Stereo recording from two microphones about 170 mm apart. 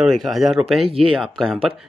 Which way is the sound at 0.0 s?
Centre (ahead or behind).